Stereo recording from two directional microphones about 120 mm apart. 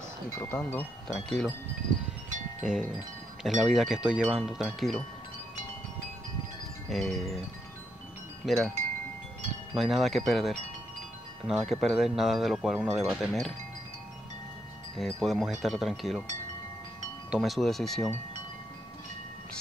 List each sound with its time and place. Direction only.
0.4 s speech: 15° left (ahead or behind)
1.0 s speech: 5° left (ahead or behind)
3.4 s speech: centre (ahead or behind)
6.9 s speech: centre (ahead or behind)
8.5 s speech: centre (ahead or behind)
9.8 s speech: centre (ahead or behind)
15.0 s speech: centre (ahead or behind)
17.3 s speech: centre (ahead or behind)